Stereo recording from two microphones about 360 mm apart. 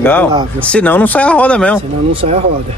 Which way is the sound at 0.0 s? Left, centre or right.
Centre.